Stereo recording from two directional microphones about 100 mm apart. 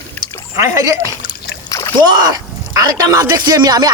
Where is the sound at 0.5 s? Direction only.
30° right (ahead or behind).